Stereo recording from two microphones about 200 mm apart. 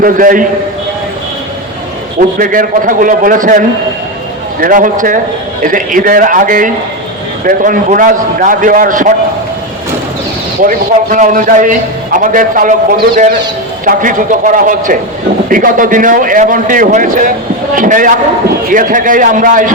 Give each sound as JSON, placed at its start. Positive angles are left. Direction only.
{"t": 0.0, "sound": "a man's voice", "side_deg": -45}
{"t": 2.4, "sound": "a man's voice", "side_deg": -45}
{"t": 4.6, "sound": "a man's voice", "side_deg": -40}
{"t": 10.6, "sound": "a man's voice", "side_deg": -40}